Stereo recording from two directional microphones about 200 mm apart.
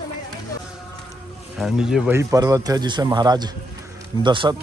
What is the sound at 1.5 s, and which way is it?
A man's voice, centre (ahead or behind).